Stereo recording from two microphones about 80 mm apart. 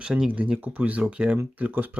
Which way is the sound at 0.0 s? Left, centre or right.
Centre.